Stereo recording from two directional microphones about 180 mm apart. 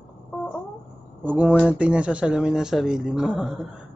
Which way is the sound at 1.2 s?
5° right (ahead or behind).